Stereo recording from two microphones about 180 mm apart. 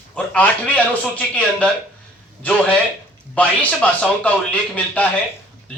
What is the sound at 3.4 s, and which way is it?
Speech, 10° left (ahead or behind).